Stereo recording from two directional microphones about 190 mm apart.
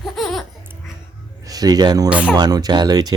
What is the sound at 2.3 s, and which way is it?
Speech, 20° right (ahead or behind).